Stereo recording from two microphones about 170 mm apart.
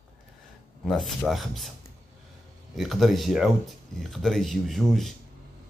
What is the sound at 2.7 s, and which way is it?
Speech, centre (ahead or behind).